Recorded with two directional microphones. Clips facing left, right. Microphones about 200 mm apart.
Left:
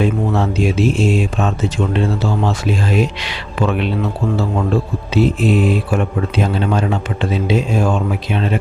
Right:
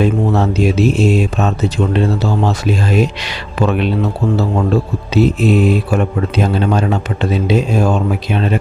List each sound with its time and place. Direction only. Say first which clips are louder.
0.0 s speech: right 3 dB; 40° right (ahead or behind)
5.1 s speech: right 2 dB; 40° right (ahead or behind)